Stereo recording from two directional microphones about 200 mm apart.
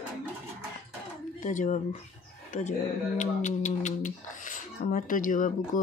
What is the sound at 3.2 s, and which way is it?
Speech, 35° left (ahead or behind).